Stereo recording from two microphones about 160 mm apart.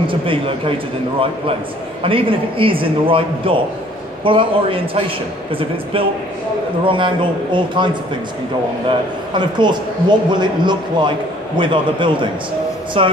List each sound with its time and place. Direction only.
0.0 s a man's voice: 35° right (ahead or behind)
2.0 s a man's voice: 35° right (ahead or behind)
9.3 s a man's voice: 30° right (ahead or behind)